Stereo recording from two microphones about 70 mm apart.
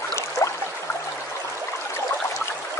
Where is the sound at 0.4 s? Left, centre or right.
Left.